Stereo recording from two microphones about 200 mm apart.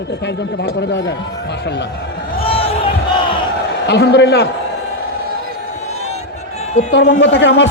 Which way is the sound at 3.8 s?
60° left (ahead or behind).